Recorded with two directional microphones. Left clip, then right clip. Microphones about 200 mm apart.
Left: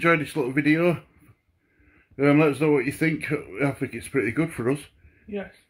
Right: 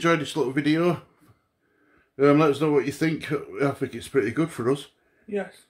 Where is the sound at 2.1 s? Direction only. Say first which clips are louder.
Right 1 dB; 15° left (ahead or behind).